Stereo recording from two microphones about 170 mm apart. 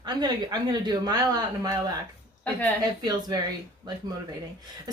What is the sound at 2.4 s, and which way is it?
Speech, 10° left (ahead or behind).